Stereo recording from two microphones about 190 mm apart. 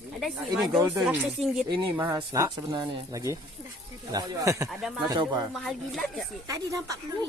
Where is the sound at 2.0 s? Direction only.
15° right (ahead or behind).